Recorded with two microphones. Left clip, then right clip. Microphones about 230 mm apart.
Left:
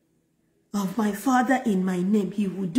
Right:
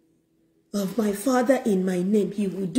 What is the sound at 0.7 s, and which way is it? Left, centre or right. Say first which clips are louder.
Speech: right 2 dB; centre.